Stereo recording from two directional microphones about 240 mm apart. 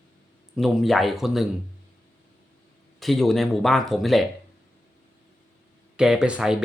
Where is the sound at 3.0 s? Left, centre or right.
Centre.